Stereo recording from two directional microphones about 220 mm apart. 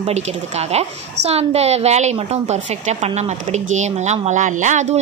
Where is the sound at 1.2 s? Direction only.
30° right (ahead or behind).